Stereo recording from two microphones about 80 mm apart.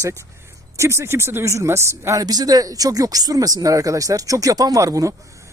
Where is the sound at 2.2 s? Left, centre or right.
Right.